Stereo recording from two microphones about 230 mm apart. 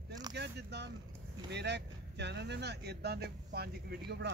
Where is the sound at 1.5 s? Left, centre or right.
Right.